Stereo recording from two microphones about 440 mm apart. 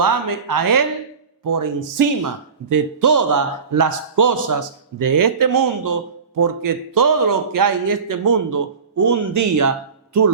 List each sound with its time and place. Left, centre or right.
0.0 s a man's voice: right